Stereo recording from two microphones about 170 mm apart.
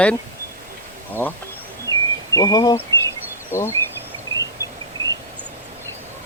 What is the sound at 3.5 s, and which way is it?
Speech, 15° left (ahead or behind).